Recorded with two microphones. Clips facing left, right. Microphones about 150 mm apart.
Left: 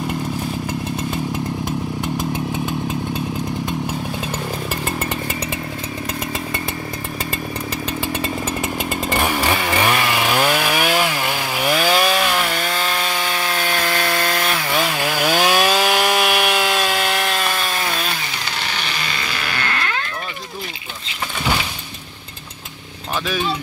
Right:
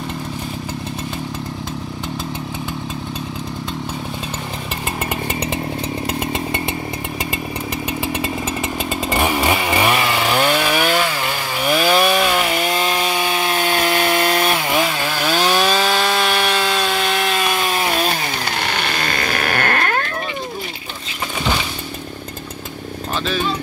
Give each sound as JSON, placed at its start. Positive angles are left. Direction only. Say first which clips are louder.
{"t": 8.0, "sound": "chainsaw", "louder": "even", "side_deg": -10}
{"t": 14.8, "sound": "wood", "louder": "even", "side_deg": 0}
{"t": 17.5, "sound": "chainsaw", "louder": "right 3 dB", "side_deg": -20}
{"t": 18.6, "sound": "chainsaw", "louder": "right 4 dB", "side_deg": -55}